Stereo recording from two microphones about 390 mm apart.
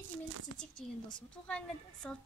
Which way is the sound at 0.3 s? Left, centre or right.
Right.